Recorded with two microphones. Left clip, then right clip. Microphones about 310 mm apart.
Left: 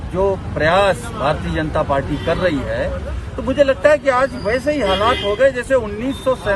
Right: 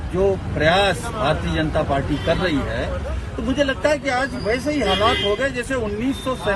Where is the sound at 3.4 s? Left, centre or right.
Centre.